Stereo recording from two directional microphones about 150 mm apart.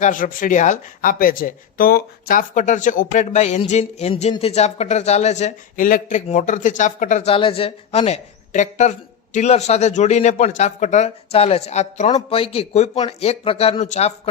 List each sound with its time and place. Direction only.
0.0 s a woman's voice: 60° left (ahead or behind)
7.3 s a woman's voice: 35° left (ahead or behind)